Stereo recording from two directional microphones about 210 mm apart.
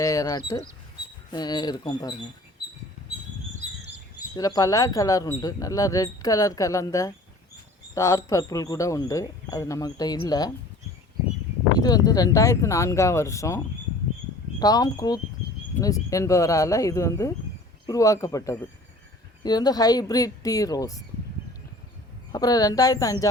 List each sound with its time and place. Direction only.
0.0 s speech: 15° left (ahead or behind)
4.4 s speech: 15° left (ahead or behind)
11.8 s speech: 20° left (ahead or behind)
14.6 s speech: 20° left (ahead or behind)
22.3 s speech: 15° left (ahead or behind)